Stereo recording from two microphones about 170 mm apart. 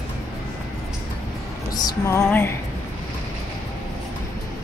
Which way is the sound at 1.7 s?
20° left (ahead or behind).